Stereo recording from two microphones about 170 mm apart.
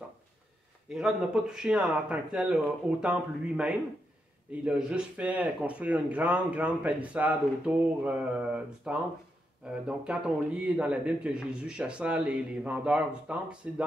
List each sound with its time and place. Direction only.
0.8 s speech: 5° right (ahead or behind)